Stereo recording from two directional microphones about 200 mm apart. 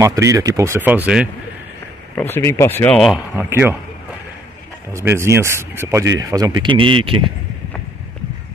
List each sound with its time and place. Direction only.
0.0 s speech: 15° right (ahead or behind)
2.1 s speech: 10° left (ahead or behind)
3.3 s speech: 10° right (ahead or behind)
4.9 s speech: 15° right (ahead or behind)